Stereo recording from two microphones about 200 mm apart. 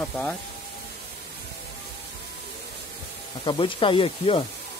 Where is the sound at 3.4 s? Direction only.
25° left (ahead or behind).